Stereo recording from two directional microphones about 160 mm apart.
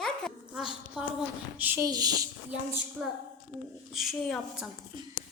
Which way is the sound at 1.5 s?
10° right (ahead or behind).